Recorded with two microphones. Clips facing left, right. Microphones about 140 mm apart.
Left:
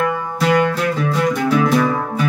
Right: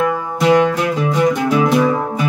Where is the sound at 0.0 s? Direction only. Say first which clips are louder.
Right 3 dB; 5° right (ahead or behind).